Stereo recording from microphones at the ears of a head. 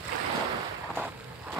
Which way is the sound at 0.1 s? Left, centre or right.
Right.